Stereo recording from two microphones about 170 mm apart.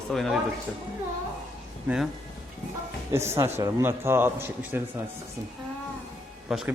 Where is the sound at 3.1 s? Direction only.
15° right (ahead or behind).